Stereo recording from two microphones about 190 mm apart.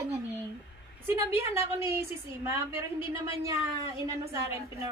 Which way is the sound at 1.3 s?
15° right (ahead or behind).